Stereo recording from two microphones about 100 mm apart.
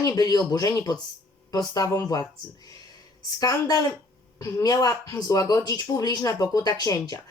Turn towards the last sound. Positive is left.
turn(degrees=40)  # may be behind; listen again after turning